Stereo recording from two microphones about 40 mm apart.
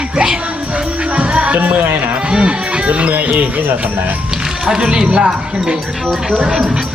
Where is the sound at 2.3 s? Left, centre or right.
Right.